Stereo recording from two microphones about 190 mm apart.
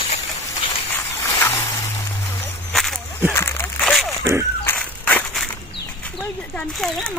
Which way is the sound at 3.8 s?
Centre (ahead or behind).